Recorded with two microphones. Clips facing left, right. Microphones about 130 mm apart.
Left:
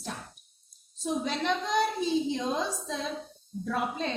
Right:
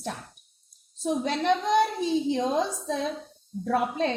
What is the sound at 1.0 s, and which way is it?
A woman's voice, 60° right (ahead or behind).